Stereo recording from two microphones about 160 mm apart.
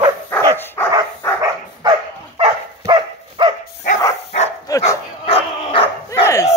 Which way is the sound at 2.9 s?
30° right (ahead or behind).